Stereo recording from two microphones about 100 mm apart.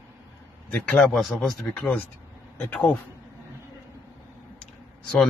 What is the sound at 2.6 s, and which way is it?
Speech, 15° left (ahead or behind).